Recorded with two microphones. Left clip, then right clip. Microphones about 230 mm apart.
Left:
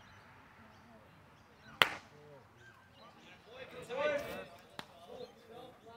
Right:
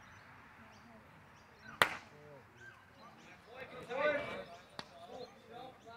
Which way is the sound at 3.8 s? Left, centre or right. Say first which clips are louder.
Right 1 dB; left.